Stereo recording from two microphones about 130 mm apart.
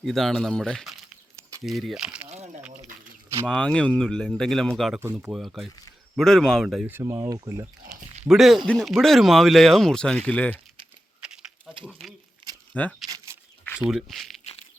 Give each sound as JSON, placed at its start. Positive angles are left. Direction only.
{"t": 0.0, "sound": "speech", "side_deg": 0}
{"t": 3.4, "sound": "speech", "side_deg": 5}
{"t": 6.8, "sound": "speech", "side_deg": -20}
{"t": 8.2, "sound": "speech", "side_deg": -5}
{"t": 11.2, "sound": "a sound", "side_deg": -5}
{"t": 12.7, "sound": "speech", "side_deg": 10}
{"t": 13.1, "sound": "a sound", "side_deg": -25}
{"t": 13.7, "sound": "speech", "side_deg": -5}